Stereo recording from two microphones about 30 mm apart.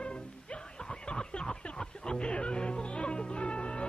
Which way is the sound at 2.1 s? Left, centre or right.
Left.